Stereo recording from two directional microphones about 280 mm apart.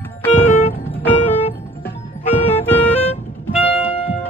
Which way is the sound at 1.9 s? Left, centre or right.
Left.